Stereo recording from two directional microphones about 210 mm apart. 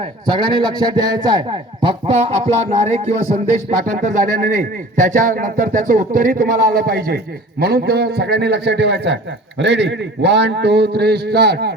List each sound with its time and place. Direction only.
0.0 s a man's voice: 20° right (ahead or behind); by 11.7 s 50° right (ahead or behind)